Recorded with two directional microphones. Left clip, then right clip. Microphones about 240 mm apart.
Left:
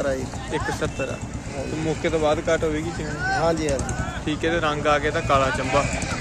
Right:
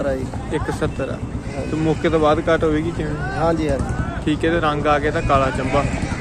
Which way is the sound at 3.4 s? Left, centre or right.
Centre.